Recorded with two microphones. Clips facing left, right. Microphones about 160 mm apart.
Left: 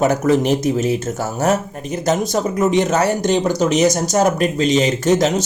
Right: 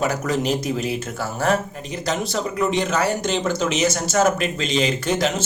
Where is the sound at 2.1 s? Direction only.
45° left (ahead or behind).